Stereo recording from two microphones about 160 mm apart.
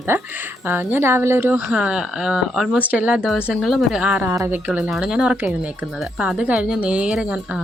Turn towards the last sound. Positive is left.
turn(degrees=-5)  # may be behind; listen again after turning